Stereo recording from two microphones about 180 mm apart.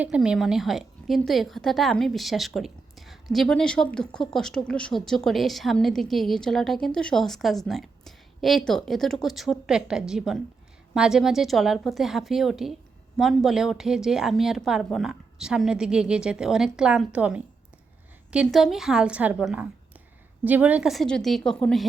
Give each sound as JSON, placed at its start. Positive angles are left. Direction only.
{"t": 0.0, "sound": "a woman's voice", "side_deg": -5}